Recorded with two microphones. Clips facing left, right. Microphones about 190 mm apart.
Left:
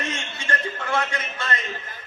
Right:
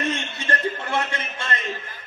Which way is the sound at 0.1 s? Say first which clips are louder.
Right 3 dB; 30° right (ahead or behind).